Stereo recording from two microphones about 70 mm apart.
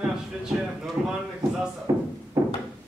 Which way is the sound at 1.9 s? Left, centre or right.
Right.